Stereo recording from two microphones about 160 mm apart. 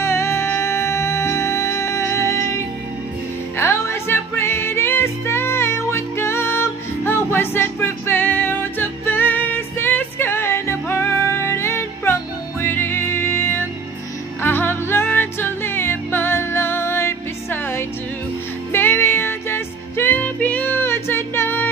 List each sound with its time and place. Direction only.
0.0 s music: 15° left (ahead or behind)
3.5 s music: 15° left (ahead or behind)